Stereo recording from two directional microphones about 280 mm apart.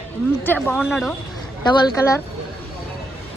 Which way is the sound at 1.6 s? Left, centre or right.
Centre.